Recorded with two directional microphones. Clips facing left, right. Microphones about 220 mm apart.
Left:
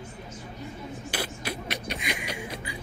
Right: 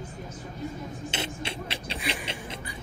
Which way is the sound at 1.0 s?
25° right (ahead or behind).